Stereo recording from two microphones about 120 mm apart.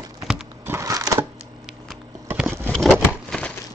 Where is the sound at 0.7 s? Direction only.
25° right (ahead or behind).